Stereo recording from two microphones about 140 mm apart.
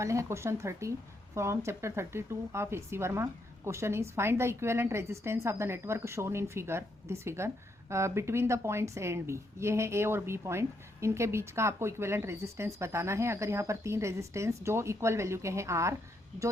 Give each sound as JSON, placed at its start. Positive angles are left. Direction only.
{"t": 0.0, "sound": "a woman's voice", "side_deg": -20}